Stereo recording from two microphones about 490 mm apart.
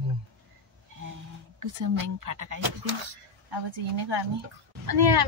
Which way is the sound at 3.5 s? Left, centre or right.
Right.